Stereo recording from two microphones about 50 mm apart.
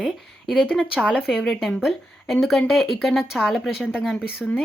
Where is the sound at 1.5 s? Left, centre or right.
Centre.